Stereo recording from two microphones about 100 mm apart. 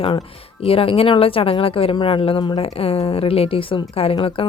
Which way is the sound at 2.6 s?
70° left (ahead or behind).